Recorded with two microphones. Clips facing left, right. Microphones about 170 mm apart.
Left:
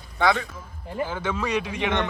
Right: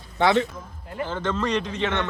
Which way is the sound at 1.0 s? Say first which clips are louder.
Right 3 dB; 10° left (ahead or behind).